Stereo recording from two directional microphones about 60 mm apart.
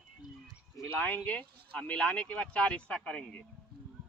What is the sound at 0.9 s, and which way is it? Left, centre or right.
Speech, left.